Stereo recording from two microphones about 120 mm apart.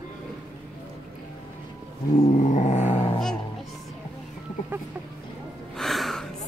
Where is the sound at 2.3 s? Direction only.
90° left; by 3.0 s 75° left (ahead or behind).